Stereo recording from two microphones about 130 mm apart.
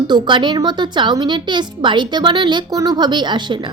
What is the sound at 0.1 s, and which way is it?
Speech, 35° right (ahead or behind).